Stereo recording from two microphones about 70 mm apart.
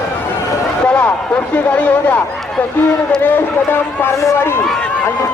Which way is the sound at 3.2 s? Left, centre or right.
Left.